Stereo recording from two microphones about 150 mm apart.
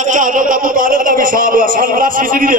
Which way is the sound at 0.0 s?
60° right (ahead or behind).